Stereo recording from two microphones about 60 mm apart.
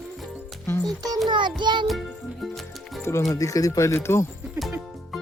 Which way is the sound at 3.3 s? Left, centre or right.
Left.